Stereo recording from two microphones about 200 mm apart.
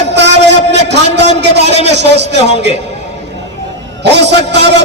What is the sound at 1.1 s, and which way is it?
A man's voice, 60° right (ahead or behind).